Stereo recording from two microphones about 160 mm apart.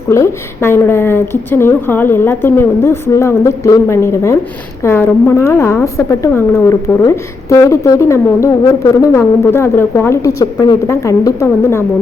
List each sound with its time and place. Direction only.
0.1 s a woman's voice: 15° left (ahead or behind)